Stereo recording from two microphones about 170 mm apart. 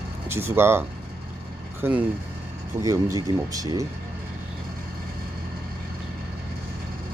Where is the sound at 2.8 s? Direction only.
20° right (ahead or behind).